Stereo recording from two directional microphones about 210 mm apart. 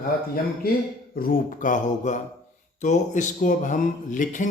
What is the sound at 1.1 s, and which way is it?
Speech, 45° left (ahead or behind).